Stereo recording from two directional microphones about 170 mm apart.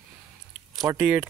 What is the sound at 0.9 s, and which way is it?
Speech, 5° right (ahead or behind).